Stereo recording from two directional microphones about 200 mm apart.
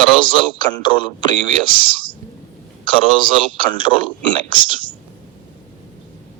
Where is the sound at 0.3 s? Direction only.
25° left (ahead or behind).